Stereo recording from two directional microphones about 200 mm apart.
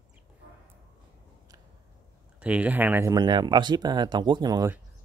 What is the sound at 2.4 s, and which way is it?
Speech, 5° right (ahead or behind).